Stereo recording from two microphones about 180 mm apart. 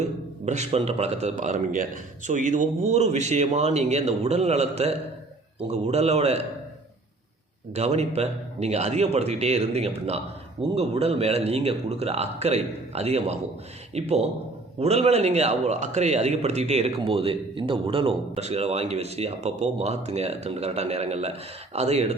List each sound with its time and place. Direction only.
0.0 s a man's voice: 40° right (ahead or behind)
7.7 s a man's voice: 40° right (ahead or behind)